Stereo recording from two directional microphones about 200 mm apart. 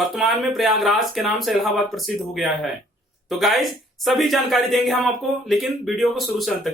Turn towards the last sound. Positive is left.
turn(degrees=0)  # may be behind; listen again after turning